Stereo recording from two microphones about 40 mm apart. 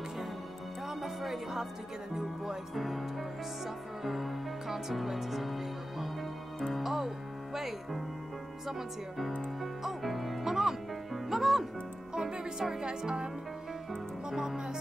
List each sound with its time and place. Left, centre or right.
0.8 s music: centre
2.7 s speech: centre
9.6 s speech: centre
11.2 s music: centre
12.1 s speech: centre